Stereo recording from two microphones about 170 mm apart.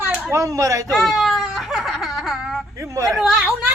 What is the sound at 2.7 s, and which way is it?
Speech, 20° right (ahead or behind).